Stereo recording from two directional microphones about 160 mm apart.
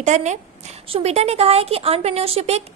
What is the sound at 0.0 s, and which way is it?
A woman's voice, 45° right (ahead or behind).